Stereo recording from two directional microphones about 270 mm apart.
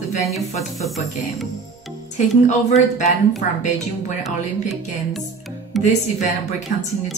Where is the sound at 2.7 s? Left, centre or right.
Left.